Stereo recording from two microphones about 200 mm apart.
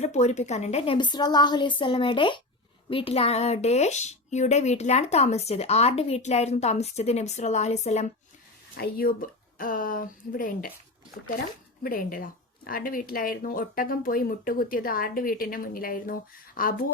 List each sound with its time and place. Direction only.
0.0 s a woman's voice: 35° left (ahead or behind)
8.7 s speech: 50° left (ahead or behind)
11.8 s speech: 45° left (ahead or behind)